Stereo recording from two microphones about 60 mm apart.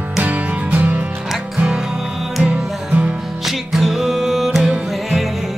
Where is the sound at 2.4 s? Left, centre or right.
Centre.